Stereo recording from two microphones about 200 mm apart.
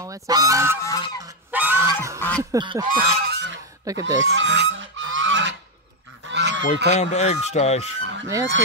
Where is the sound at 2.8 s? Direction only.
55° right (ahead or behind).